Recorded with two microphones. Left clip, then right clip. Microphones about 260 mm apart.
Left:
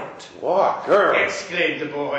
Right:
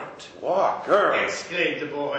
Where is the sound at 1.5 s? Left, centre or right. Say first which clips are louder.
Left 3 dB; right.